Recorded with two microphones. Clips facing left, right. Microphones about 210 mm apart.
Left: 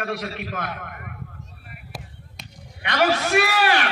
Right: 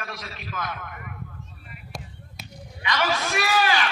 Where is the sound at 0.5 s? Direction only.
60° left (ahead or behind).